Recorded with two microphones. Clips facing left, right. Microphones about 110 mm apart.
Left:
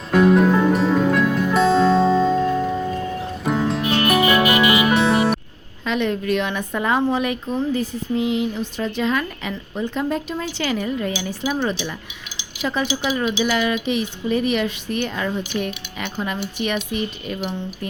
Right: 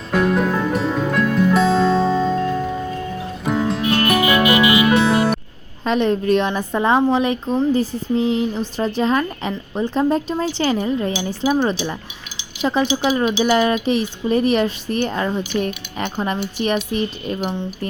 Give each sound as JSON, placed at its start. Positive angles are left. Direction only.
{"t": 0.1, "sound": "music", "side_deg": 0}
{"t": 5.8, "sound": "a woman's voice", "side_deg": -35}